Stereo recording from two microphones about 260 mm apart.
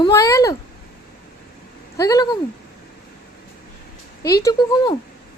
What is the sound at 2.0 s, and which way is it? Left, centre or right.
Speech, centre.